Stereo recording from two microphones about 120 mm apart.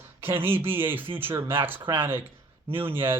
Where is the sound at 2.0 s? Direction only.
15° right (ahead or behind).